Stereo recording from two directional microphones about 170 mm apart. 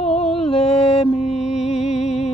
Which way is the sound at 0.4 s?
35° left (ahead or behind).